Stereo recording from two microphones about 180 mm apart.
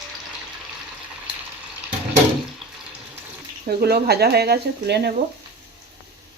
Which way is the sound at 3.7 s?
60° right (ahead or behind).